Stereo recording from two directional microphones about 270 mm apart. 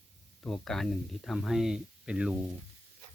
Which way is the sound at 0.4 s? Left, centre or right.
Centre.